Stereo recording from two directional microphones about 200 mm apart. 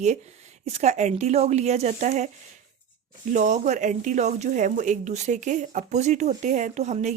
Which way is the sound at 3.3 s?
35° right (ahead or behind).